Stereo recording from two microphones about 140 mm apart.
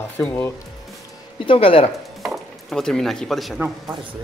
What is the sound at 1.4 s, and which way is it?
Speech, 40° left (ahead or behind).